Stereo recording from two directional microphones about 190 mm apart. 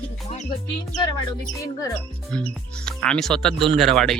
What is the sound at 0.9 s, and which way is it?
Speech, 20° left (ahead or behind).